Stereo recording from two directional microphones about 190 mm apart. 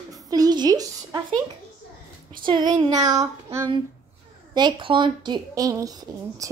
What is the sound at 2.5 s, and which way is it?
Speech, 25° right (ahead or behind).